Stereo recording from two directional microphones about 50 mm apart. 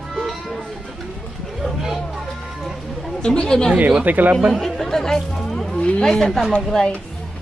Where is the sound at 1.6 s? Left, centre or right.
Centre.